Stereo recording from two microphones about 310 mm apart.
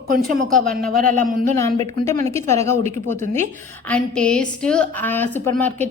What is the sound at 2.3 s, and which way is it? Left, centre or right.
A woman's voice, centre.